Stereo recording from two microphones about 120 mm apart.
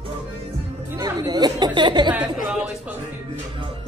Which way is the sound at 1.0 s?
30° right (ahead or behind).